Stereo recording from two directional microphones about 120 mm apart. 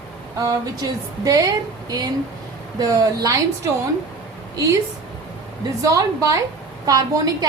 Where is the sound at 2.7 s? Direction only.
30° right (ahead or behind).